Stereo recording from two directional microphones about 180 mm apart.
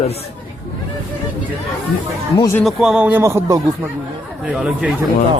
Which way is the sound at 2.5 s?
Centre (ahead or behind).